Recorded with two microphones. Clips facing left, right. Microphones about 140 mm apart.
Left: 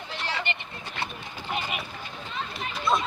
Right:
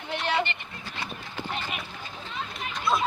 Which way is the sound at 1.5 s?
10° left (ahead or behind).